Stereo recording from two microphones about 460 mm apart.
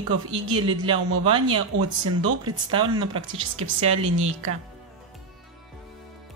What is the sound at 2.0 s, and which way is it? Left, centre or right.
Speech, right.